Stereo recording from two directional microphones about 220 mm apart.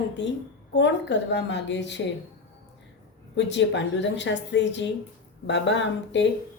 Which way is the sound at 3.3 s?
55° left (ahead or behind).